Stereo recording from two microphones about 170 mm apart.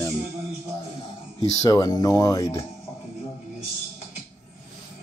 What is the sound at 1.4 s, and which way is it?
Speech, 20° left (ahead or behind).